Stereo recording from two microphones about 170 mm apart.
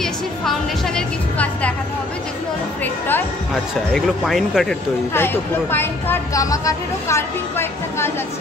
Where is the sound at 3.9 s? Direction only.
Centre (ahead or behind).